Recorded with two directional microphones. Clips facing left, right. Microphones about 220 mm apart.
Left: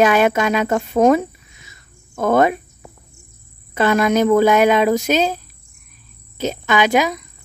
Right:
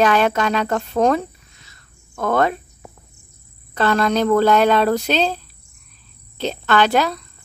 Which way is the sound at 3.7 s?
10° left (ahead or behind).